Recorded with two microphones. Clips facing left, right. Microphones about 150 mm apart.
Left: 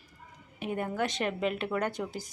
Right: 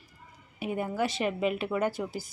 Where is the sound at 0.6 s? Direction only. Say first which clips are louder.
Right 2 dB; 5° right (ahead or behind).